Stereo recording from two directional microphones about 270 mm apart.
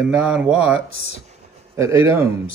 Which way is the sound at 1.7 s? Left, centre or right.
Centre.